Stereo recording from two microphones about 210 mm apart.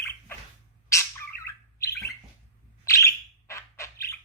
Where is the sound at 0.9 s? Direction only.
15° left (ahead or behind).